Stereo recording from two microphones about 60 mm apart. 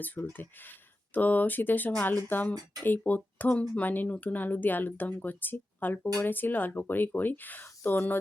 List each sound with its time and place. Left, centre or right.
0.0 s speech: left